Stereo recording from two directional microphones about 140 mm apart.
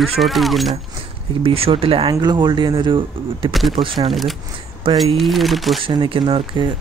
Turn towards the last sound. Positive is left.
turn(degrees=-35)  # may be behind; listen again after turning